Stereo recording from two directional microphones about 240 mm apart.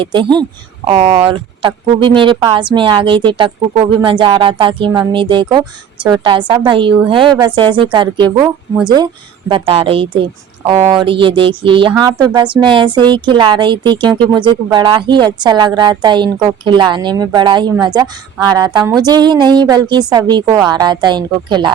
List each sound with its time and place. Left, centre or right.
0.0 s a woman's voice: centre
9.5 s a woman's voice: right